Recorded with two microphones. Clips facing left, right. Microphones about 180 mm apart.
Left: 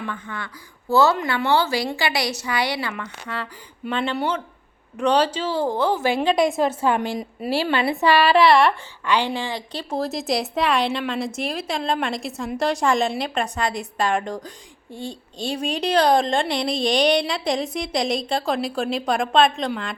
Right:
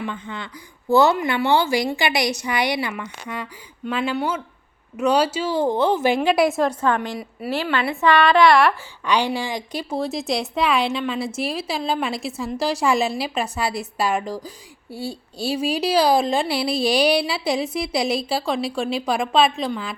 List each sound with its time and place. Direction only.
0.0 s a woman's voice: 20° right (ahead or behind)
6.2 s a woman's voice: 5° right (ahead or behind)
7.1 s a woman's voice: 25° left (ahead or behind)
8.0 s a woman's voice: 10° left (ahead or behind)
9.0 s a woman's voice: 15° right (ahead or behind)
9.9 s a woman's voice: centre (ahead or behind)